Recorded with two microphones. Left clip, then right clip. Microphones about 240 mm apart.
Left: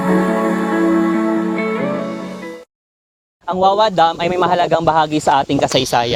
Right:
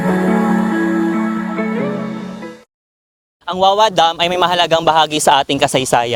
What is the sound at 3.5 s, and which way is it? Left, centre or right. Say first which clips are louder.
A man's voice: right 1 dB; right.